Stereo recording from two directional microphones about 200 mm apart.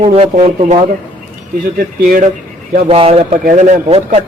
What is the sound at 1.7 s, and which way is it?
Speech, 45° right (ahead or behind).